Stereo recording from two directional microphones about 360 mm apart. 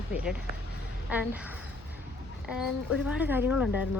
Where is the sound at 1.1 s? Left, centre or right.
Centre.